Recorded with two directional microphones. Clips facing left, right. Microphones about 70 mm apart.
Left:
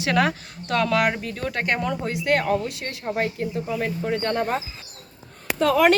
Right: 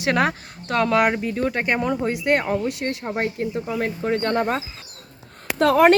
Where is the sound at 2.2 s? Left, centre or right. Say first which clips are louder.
Left 1 dB; right.